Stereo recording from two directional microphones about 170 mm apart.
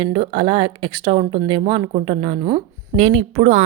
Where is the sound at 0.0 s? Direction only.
30° right (ahead or behind).